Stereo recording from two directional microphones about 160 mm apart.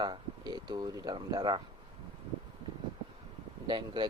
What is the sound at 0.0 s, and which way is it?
Speech, 25° right (ahead or behind).